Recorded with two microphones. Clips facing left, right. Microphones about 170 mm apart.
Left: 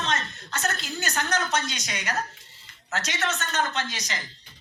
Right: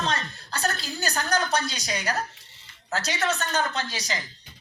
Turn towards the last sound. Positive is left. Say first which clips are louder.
# right 1 dB
turn(degrees=-35)  # may be behind; listen again after turning